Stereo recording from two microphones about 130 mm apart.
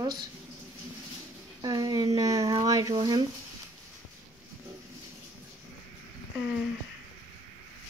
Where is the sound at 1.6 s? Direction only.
30° right (ahead or behind).